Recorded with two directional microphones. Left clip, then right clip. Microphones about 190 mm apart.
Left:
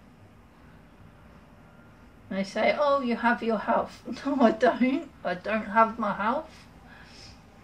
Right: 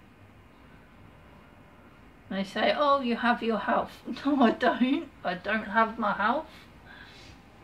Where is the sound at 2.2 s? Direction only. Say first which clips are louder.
Left 1 dB; centre (ahead or behind).